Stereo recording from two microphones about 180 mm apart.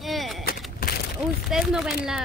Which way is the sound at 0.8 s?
55° left (ahead or behind).